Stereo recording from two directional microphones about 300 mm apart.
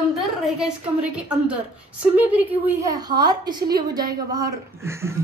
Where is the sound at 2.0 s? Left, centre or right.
Centre.